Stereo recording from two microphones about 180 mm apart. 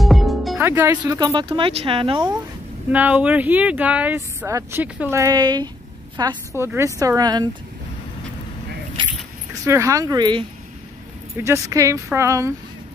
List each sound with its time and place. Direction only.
0.0 s music: centre (ahead or behind)
0.6 s speech: 15° right (ahead or behind); by 2.2 s 30° right (ahead or behind)
2.9 s speech: 10° right (ahead or behind)
9.7 s speech: 15° right (ahead or behind)